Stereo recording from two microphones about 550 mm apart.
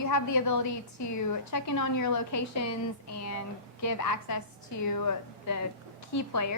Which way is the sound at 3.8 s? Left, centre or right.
Left.